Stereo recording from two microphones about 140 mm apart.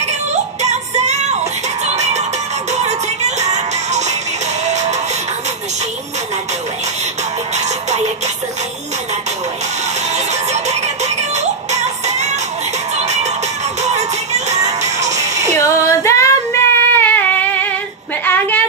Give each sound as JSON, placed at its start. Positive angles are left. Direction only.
{"t": 0.0, "sound": "music", "side_deg": -55}
{"t": 10.1, "sound": "music", "side_deg": -55}
{"t": 15.6, "sound": "child singing", "side_deg": 20}
{"t": 18.2, "sound": "a sound", "side_deg": 15}